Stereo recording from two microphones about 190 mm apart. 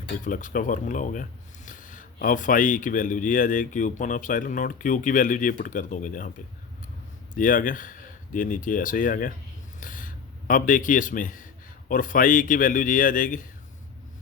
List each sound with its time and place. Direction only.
0.3 s speech: 45° left (ahead or behind)
7.3 s speech: 45° left (ahead or behind)